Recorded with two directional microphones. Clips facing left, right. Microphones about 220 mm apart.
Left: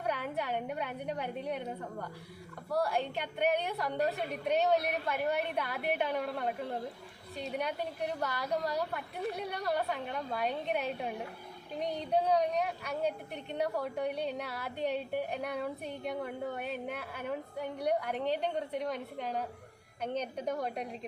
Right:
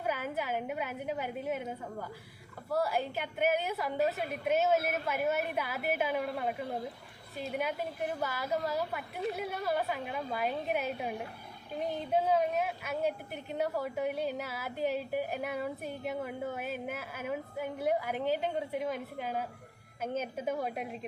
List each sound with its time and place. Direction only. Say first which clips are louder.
0.0 s a woman's voice: even; 5° right (ahead or behind)